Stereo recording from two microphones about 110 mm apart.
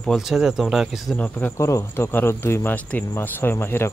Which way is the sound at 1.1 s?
10° left (ahead or behind).